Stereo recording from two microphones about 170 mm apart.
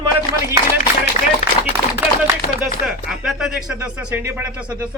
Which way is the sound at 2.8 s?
Centre (ahead or behind).